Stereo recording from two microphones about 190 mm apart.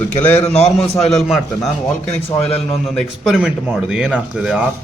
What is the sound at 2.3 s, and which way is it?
Speech, 30° left (ahead or behind).